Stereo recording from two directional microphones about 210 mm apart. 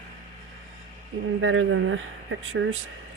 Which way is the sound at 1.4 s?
65° right (ahead or behind).